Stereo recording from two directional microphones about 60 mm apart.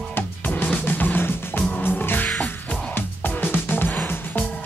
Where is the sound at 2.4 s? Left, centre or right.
Left.